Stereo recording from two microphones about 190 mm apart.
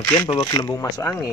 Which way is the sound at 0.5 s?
15° left (ahead or behind).